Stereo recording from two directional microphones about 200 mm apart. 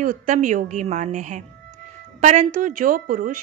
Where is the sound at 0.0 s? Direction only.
40° right (ahead or behind).